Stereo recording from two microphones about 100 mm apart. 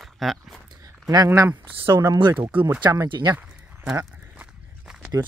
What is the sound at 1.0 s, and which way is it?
Speech, 40° right (ahead or behind).